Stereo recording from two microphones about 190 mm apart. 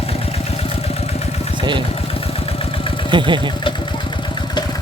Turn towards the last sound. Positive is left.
turn(degrees=25)  # may be behind; listen again after turning